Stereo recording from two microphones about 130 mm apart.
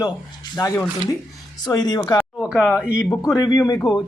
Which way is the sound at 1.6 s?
30° left (ahead or behind).